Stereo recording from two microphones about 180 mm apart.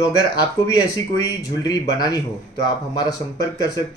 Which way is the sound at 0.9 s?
20° left (ahead or behind).